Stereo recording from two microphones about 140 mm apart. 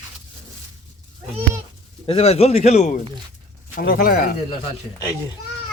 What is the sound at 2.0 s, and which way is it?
Speech, 45° left (ahead or behind).